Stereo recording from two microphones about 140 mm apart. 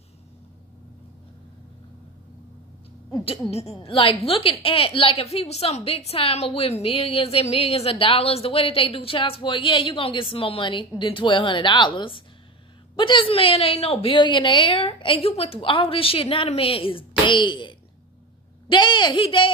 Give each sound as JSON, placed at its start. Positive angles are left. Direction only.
{"t": 3.3, "sound": "a woman's voice", "side_deg": 50}